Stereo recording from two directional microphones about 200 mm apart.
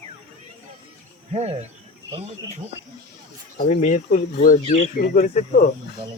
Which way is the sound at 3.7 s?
35° left (ahead or behind).